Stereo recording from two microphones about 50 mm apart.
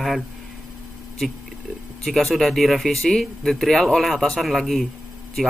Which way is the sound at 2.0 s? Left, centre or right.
Centre.